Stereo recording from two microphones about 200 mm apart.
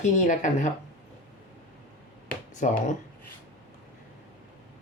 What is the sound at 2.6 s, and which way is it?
Speech, 40° left (ahead or behind).